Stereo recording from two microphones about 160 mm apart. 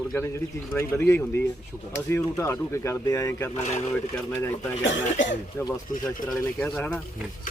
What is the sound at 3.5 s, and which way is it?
Speech, 45° left (ahead or behind).